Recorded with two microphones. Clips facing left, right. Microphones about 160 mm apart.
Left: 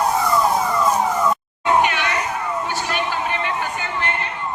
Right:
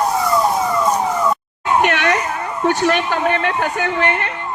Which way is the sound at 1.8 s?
65° right (ahead or behind).